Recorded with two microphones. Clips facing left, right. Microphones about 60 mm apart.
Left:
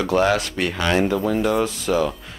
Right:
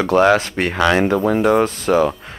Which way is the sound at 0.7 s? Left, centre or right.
Right.